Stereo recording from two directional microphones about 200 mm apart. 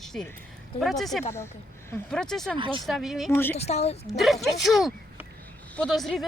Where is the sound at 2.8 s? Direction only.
Centre (ahead or behind).